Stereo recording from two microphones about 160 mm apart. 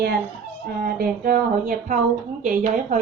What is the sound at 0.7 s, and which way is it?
A woman's voice, 65° right (ahead or behind).